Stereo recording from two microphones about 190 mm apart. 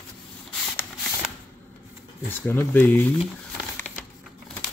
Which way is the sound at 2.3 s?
10° left (ahead or behind).